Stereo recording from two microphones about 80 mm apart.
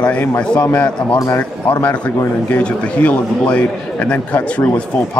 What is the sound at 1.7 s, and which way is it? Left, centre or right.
A man's voice, centre.